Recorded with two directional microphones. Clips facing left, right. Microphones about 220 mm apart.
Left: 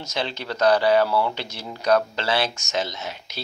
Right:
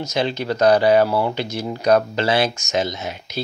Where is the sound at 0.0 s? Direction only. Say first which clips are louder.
Right 7 dB; 15° right (ahead or behind).